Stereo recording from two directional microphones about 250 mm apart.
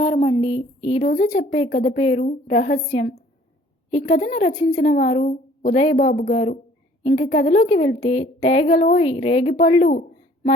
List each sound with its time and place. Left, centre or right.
0.0 s a woman's voice: left